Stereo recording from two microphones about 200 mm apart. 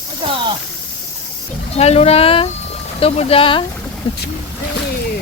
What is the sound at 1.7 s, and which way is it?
Speech, 30° left (ahead or behind).